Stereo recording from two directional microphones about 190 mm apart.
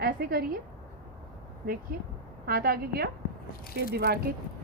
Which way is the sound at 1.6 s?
50° right (ahead or behind).